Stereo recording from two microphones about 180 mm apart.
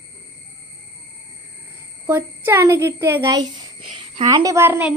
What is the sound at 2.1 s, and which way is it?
A child's voice, 15° right (ahead or behind).